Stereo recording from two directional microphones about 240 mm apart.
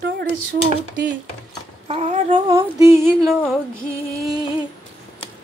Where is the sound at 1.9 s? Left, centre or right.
Right.